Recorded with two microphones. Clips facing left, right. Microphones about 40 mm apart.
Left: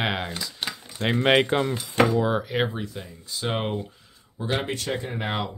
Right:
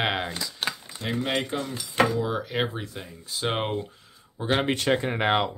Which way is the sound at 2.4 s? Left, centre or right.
Centre.